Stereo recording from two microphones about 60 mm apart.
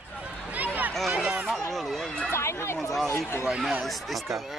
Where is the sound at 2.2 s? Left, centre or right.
Left.